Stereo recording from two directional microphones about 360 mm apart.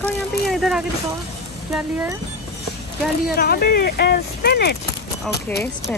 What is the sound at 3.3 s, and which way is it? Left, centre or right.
Speech, left.